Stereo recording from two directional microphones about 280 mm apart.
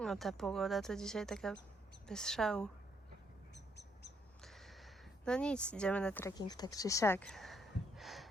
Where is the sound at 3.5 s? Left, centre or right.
Left.